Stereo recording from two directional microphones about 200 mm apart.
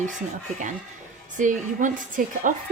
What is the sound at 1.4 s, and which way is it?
A woman's voice, 40° right (ahead or behind).